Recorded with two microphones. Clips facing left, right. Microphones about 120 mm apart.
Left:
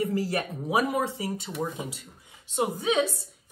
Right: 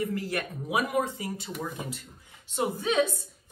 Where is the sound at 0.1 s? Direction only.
30° left (ahead or behind).